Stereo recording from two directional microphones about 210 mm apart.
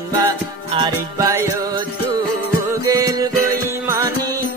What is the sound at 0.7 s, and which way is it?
Music, 20° right (ahead or behind).